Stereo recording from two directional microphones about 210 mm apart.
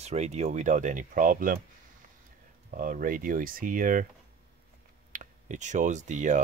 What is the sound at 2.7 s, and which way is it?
Speech, 40° right (ahead or behind).